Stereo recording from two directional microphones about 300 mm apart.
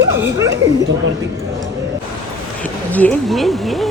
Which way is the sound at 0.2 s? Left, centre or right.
Centre.